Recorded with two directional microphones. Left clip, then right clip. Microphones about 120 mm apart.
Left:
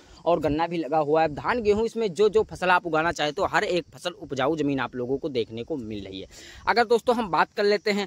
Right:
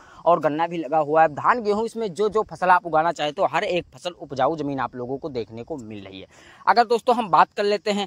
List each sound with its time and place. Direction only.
0.2 s speech: 5° left (ahead or behind)
1.6 s speech: 10° right (ahead or behind)
2.6 s speech: 10° left (ahead or behind)
4.3 s speech: 15° left (ahead or behind)
5.4 s speech: 40° right (ahead or behind)
5.9 s speech: 30° left (ahead or behind)
6.6 s speech: 10° right (ahead or behind)